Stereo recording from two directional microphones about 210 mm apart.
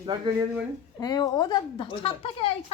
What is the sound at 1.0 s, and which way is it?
A woman's voice, 20° left (ahead or behind).